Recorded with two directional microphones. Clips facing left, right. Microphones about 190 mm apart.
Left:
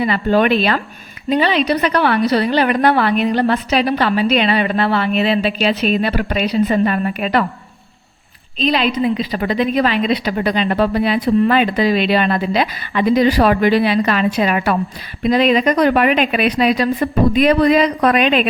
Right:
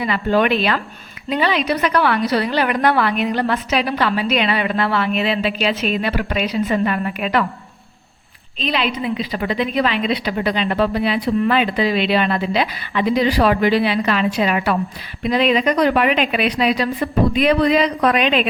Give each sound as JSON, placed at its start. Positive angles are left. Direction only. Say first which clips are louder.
{"t": 0.0, "sound": "a woman's voice", "louder": "left 3 dB", "side_deg": 35}
{"t": 8.5, "sound": "a woman's voice", "louder": "left 5 dB", "side_deg": 40}